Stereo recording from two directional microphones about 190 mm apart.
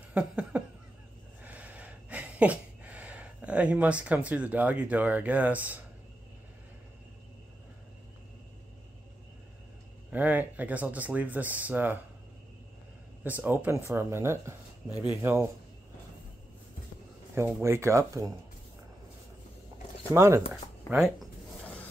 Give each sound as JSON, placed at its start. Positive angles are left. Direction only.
{"t": 0.1, "sound": "laughter", "side_deg": -5}
{"t": 1.4, "sound": "a sound", "side_deg": -10}
{"t": 10.1, "sound": "speech", "side_deg": -10}
{"t": 13.2, "sound": "speech", "side_deg": -10}
{"t": 14.9, "sound": "speech", "side_deg": 20}
{"t": 15.2, "sound": "speech", "side_deg": -15}
{"t": 17.4, "sound": "speech", "side_deg": -15}
{"t": 20.0, "sound": "speech", "side_deg": -15}
{"t": 20.9, "sound": "a sound", "side_deg": 0}